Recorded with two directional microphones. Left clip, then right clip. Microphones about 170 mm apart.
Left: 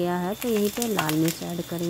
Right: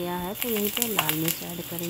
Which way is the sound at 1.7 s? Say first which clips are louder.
Left 5 dB; 20° left (ahead or behind).